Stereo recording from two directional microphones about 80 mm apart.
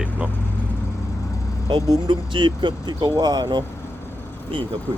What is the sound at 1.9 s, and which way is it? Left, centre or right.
Speech, right.